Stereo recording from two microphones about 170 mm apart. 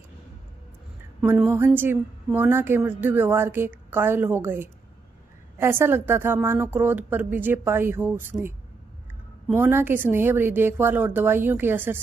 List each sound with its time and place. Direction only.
1.2 s a woman's voice: 10° right (ahead or behind)
9.6 s a woman's voice: 15° right (ahead or behind)